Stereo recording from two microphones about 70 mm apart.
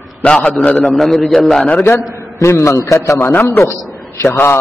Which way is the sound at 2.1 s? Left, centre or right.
Left.